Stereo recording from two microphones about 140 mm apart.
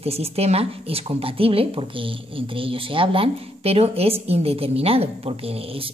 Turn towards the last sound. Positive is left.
turn(degrees=-45)  # may be behind; listen again after turning